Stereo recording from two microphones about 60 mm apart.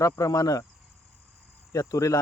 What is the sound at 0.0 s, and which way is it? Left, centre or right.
Speech, left.